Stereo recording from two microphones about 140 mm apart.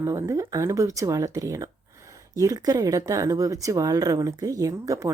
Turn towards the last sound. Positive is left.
turn(degrees=-20)  # may be behind; listen again after turning